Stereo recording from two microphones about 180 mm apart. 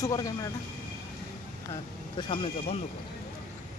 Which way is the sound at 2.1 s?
25° left (ahead or behind).